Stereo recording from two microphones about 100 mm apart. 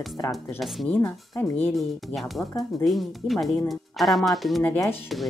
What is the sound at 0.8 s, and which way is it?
Speech, 20° left (ahead or behind).